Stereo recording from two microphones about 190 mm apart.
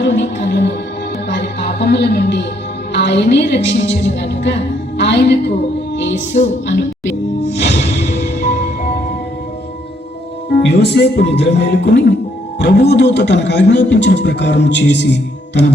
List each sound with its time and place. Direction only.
0.0 s music: 70° left (ahead or behind)
2.9 s a woman's voice: 65° left (ahead or behind)
5.9 s music: 70° left (ahead or behind)
6.4 s speech: 70° left (ahead or behind)
10.6 s a man's voice: 60° left (ahead or behind)